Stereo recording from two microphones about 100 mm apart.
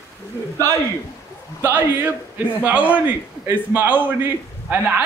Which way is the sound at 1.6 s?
20° right (ahead or behind).